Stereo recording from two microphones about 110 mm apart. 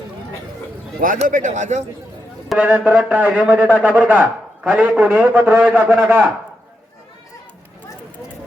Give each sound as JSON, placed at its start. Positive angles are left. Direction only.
{"t": 1.2, "sound": "speech", "side_deg": -90}
{"t": 2.6, "sound": "a man's voice", "side_deg": -15}